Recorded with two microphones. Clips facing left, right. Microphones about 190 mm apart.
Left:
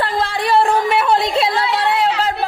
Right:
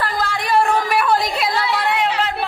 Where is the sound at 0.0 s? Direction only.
30° left (ahead or behind).